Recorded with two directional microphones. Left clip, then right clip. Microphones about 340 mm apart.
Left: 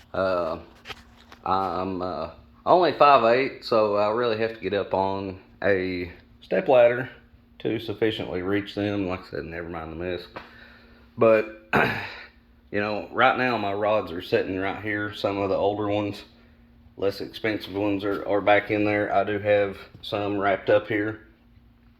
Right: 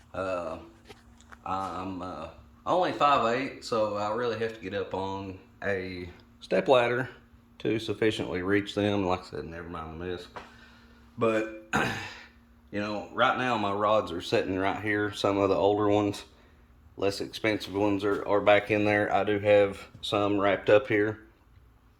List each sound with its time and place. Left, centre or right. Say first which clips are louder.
1.5 s speech: left 8 dB; centre
6.5 s speech: left 5 dB; centre
11.2 s speech: left 8 dB; centre
13.8 s speech: left 1 dB; right
14.1 s speech: left 3 dB; centre